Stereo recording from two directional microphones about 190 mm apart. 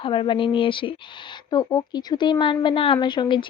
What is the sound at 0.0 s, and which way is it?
A woman's voice, 25° left (ahead or behind).